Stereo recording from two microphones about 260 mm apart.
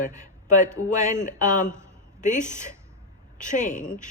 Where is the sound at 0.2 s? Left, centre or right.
Left.